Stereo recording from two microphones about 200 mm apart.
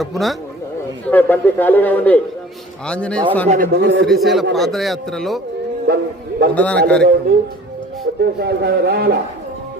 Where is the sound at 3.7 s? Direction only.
60° right (ahead or behind).